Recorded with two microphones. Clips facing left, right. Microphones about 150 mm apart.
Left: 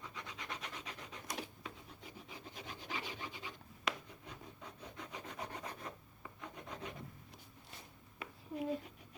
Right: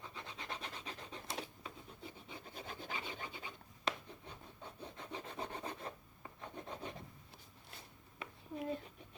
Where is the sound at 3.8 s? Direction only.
30° right (ahead or behind).